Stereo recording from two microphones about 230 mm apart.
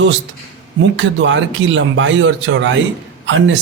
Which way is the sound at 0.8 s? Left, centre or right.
Right.